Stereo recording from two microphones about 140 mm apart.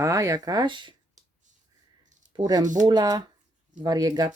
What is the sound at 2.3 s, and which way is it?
Speech, 30° right (ahead or behind).